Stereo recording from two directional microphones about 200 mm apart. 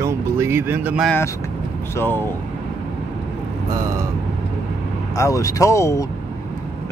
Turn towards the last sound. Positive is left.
turn(degrees=15)  # may be behind; listen again after turning